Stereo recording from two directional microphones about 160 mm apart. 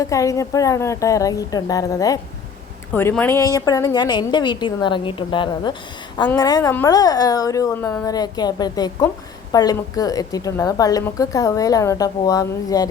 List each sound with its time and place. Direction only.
0.0 s a woman's voice: 20° left (ahead or behind)